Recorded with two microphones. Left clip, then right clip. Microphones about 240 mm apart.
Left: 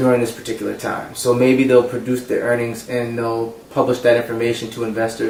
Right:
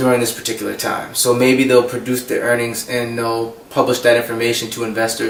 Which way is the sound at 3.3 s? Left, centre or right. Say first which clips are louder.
Right 2 dB; left.